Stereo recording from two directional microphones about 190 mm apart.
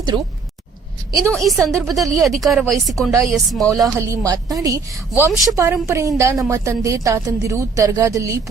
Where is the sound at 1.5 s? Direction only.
15° right (ahead or behind).